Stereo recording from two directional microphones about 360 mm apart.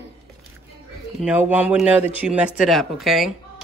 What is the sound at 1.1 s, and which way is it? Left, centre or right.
A woman's voice, centre.